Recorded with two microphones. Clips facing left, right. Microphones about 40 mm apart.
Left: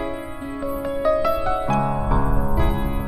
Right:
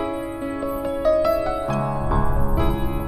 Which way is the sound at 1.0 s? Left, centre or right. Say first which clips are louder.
Right 2 dB; centre.